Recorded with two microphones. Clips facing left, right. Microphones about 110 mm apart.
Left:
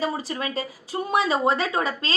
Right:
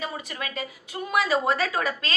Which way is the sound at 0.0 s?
30° left (ahead or behind).